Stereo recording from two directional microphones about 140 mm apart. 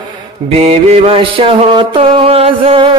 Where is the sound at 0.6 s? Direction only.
45° right (ahead or behind).